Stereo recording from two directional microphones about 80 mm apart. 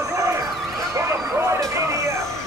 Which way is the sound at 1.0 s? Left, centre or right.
Right.